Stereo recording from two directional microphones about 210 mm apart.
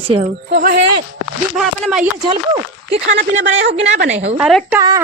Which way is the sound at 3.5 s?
55° right (ahead or behind).